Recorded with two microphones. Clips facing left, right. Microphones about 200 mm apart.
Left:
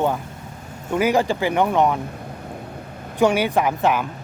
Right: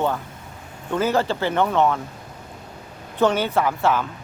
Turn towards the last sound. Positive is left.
turn(degrees=15)  # may be behind; listen again after turning